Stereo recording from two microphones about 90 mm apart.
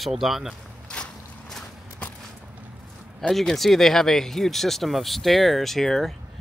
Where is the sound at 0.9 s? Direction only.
10° left (ahead or behind).